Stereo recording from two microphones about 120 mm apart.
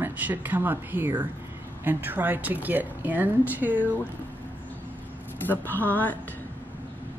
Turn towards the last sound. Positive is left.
turn(degrees=15)  # may be behind; listen again after turning